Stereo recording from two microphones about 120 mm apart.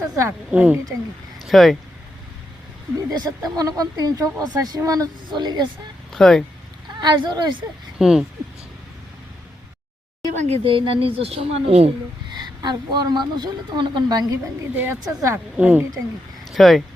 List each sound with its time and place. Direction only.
0.2 s a woman's voice: 15° right (ahead or behind)
1.5 s speech: centre (ahead or behind)
3.1 s speech: 30° right (ahead or behind)
6.1 s speech: 5° left (ahead or behind)
7.0 s speech: 35° right (ahead or behind)
7.9 s speech: 5° right (ahead or behind)
10.3 s speech: 70° right (ahead or behind)
10.6 s speech: 45° right (ahead or behind)
12.3 s speech: 35° right (ahead or behind)
15.5 s a woman's voice: 15° right (ahead or behind)
16.5 s speech: centre (ahead or behind)